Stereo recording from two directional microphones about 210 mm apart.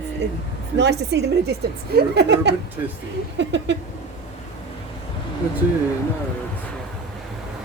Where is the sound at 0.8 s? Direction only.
55° right (ahead or behind).